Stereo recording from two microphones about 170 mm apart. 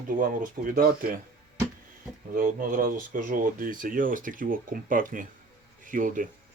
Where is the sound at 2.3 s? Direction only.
50° right (ahead or behind).